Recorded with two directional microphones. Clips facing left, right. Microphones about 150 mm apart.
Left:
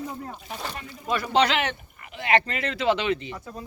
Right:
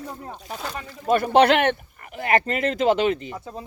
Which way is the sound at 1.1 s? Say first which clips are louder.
Right 6 dB; 55° right (ahead or behind).